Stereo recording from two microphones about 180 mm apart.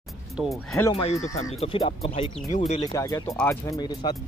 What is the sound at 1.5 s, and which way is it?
Speech, 35° left (ahead or behind).